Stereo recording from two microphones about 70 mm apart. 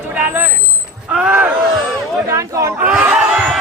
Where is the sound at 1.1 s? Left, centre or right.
Centre.